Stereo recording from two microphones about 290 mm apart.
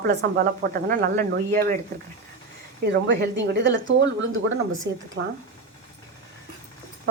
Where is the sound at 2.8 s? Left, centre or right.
Right.